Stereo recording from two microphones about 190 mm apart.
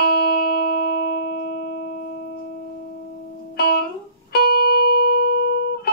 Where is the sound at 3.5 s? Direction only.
55° left (ahead or behind).